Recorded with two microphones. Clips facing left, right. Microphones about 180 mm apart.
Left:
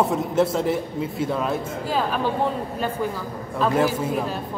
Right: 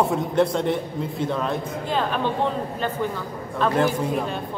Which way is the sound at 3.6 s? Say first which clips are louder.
Even; 5° left (ahead or behind).